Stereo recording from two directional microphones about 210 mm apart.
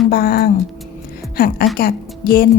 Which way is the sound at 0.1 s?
45° left (ahead or behind).